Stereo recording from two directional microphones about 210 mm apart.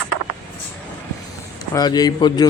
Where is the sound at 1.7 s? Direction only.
20° left (ahead or behind).